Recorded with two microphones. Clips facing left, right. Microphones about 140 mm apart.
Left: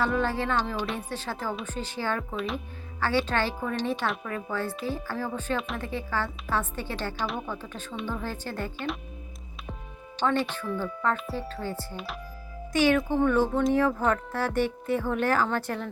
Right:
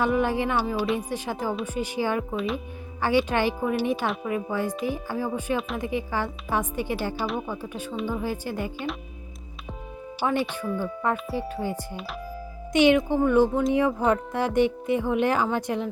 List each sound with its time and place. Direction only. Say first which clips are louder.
0.0 s speech: right 3 dB; 15° right (ahead or behind)
2.3 s speech: right 4 dB; centre (ahead or behind)
3.0 s speech: right 4 dB; 15° right (ahead or behind)
4.0 s speech: right 2 dB; 5° right (ahead or behind)
4.3 s speech: right 4 dB; 15° right (ahead or behind)
5.5 s speech: right 3 dB; centre (ahead or behind)
5.8 s speech: right 3 dB; 15° right (ahead or behind)
10.2 s speech: right 1 dB; 10° right (ahead or behind)